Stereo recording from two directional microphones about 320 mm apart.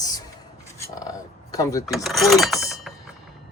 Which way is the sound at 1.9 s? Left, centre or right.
Centre.